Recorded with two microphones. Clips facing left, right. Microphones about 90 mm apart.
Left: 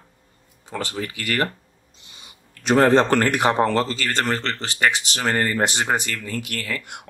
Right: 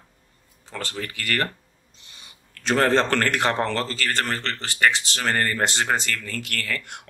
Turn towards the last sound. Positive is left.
turn(degrees=15)  # may be behind; listen again after turning